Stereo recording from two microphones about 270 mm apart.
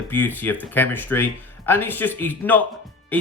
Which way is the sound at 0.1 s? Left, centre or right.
Centre.